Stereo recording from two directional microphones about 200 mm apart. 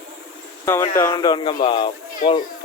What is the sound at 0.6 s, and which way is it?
Speech, 15° left (ahead or behind).